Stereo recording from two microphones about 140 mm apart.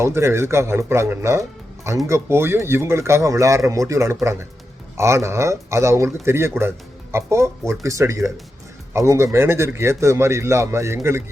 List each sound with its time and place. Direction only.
0.0 s speech: 20° right (ahead or behind)